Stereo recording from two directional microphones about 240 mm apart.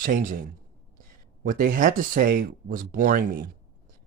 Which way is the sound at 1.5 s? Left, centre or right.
Right.